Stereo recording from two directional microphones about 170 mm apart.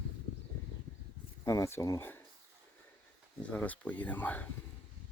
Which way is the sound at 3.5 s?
10° left (ahead or behind).